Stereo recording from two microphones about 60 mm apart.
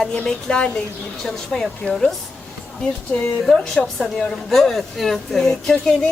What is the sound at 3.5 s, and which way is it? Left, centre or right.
Speech, centre.